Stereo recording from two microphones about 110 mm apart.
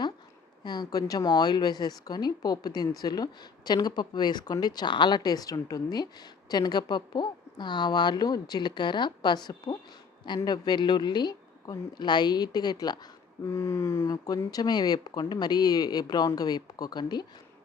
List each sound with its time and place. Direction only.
0.6 s a woman's voice: 40° left (ahead or behind)
13.5 s a sound: 25° left (ahead or behind)
14.3 s a woman's voice: 35° left (ahead or behind)